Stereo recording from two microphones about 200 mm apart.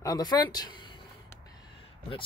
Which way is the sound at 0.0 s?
20° left (ahead or behind).